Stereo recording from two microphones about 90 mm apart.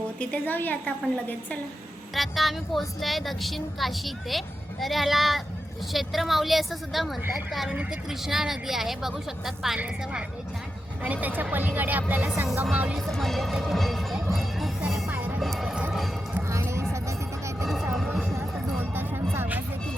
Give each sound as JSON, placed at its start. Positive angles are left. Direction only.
{"t": 0.2, "sound": "a woman's voice", "side_deg": 15}
{"t": 2.1, "sound": "a woman's voice", "side_deg": 0}
{"t": 13.0, "sound": "speech", "side_deg": 0}
{"t": 14.8, "sound": "music", "side_deg": -5}
{"t": 15.1, "sound": "music", "side_deg": -20}
{"t": 15.4, "sound": "music", "side_deg": 0}
{"t": 16.5, "sound": "music", "side_deg": -30}
{"t": 17.9, "sound": "a sound", "side_deg": 0}
{"t": 18.8, "sound": "music", "side_deg": -25}